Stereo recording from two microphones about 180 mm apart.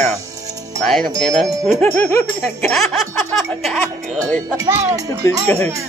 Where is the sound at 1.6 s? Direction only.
10° left (ahead or behind).